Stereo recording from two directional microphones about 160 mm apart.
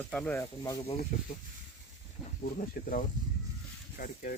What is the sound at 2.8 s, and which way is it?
Speech, 70° left (ahead or behind).